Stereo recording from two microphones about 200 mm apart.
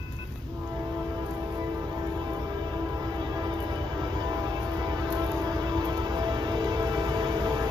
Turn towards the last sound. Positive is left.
turn(degrees=-20)  # may be behind; listen again after turning